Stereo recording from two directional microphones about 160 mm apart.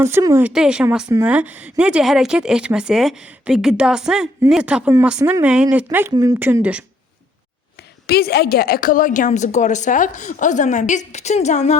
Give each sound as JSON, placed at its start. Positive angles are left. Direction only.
{"t": 0.0, "sound": "speech", "side_deg": -15}
{"t": 0.5, "sound": "speech", "side_deg": -5}
{"t": 8.0, "sound": "a woman's voice", "side_deg": 80}